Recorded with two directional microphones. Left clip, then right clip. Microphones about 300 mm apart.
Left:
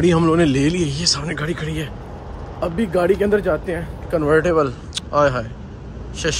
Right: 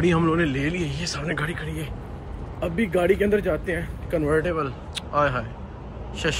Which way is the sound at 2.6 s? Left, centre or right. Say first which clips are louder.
Left 4 dB; centre.